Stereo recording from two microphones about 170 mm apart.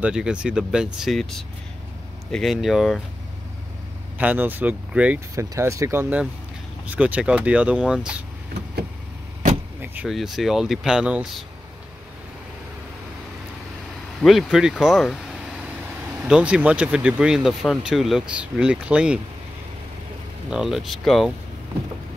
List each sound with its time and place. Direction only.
0.0 s speech: 5° right (ahead or behind)
4.2 s speech: 10° right (ahead or behind)
9.8 s speech: 5° right (ahead or behind)
14.2 s speech: centre (ahead or behind)
16.3 s speech: 5° right (ahead or behind)
20.4 s speech: 5° right (ahead or behind)